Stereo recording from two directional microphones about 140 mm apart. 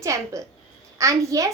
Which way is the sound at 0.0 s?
20° right (ahead or behind).